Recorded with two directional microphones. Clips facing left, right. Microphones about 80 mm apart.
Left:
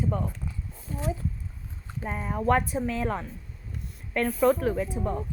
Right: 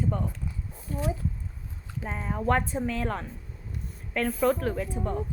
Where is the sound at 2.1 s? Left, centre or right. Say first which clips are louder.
Left 2 dB; centre.